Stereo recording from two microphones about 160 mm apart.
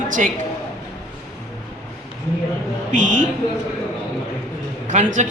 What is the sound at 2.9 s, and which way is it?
Speech, 50° right (ahead or behind).